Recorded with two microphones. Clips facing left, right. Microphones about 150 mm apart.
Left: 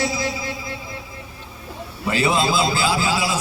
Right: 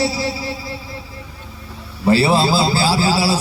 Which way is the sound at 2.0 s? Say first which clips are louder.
Right 6 dB; 35° right (ahead or behind).